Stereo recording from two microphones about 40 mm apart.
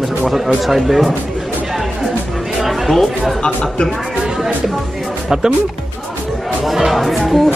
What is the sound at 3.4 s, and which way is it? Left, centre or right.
Speech, centre.